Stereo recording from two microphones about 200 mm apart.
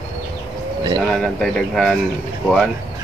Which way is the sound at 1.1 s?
5° left (ahead or behind).